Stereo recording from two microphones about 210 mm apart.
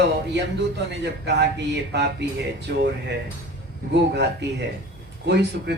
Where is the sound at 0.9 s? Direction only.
55° right (ahead or behind).